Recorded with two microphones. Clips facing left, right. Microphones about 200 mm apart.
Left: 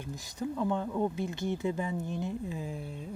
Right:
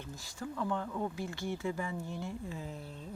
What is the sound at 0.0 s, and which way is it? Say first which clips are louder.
Speech: left 6 dB; 20° left (ahead or behind).